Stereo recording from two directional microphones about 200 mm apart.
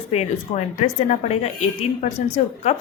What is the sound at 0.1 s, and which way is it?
A woman's voice, 35° left (ahead or behind).